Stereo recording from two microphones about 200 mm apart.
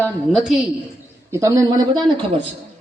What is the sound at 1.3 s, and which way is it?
Speech, 15° right (ahead or behind).